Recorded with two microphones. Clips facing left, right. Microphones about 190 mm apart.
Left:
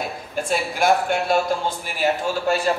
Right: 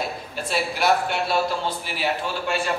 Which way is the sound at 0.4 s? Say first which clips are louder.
Left 3 dB; 50° left (ahead or behind).